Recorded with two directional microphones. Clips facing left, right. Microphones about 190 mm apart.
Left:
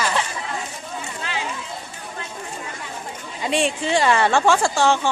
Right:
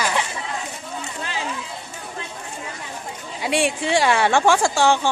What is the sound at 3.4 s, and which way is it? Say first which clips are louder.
A woman's voice: even; 10° right (ahead or behind).